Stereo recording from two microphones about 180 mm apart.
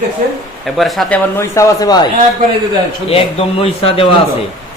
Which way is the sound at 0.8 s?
Centre (ahead or behind).